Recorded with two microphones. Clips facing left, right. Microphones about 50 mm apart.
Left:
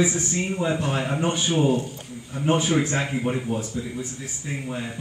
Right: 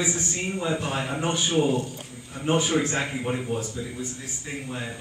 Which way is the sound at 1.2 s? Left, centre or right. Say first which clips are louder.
Left 1 dB; centre.